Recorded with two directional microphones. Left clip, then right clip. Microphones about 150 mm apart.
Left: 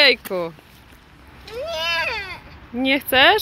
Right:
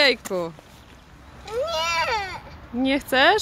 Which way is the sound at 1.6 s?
30° right (ahead or behind).